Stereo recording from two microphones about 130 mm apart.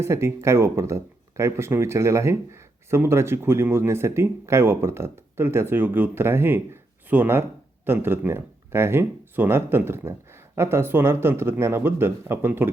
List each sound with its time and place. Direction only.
0.0 s speech: 20° right (ahead or behind)